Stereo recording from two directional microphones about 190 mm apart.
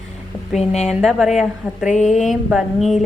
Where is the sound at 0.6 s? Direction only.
35° left (ahead or behind).